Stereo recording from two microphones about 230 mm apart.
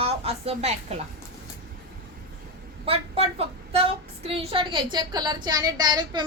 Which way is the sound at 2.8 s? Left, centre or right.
Right.